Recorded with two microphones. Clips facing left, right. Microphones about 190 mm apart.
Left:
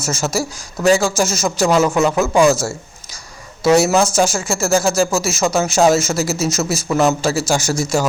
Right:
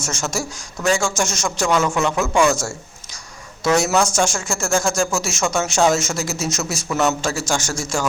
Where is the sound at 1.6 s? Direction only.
35° left (ahead or behind).